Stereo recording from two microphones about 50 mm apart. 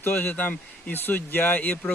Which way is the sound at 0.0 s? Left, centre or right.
Left.